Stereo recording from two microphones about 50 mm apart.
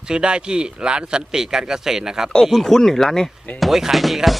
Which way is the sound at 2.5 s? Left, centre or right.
Centre.